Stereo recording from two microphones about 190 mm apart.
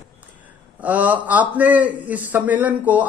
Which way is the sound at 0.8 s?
10° right (ahead or behind).